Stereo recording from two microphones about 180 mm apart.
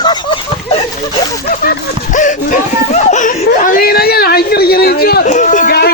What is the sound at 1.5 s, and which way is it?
Speech, 45° left (ahead or behind).